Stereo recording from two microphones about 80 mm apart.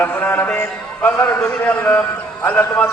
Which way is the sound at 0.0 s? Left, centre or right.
Left.